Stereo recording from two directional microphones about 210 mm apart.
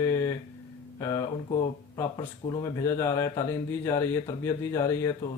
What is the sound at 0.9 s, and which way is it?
Speech, 15° left (ahead or behind).